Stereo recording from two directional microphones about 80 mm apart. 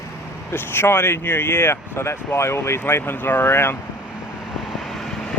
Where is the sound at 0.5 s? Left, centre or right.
Left.